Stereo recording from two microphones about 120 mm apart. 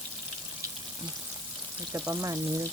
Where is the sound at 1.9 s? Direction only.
30° right (ahead or behind).